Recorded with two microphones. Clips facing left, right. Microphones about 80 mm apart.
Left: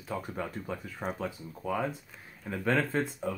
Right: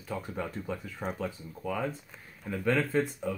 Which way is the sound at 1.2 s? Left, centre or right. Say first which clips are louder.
Even; left.